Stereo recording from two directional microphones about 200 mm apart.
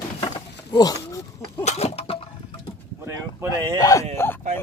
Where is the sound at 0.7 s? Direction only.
20° left (ahead or behind).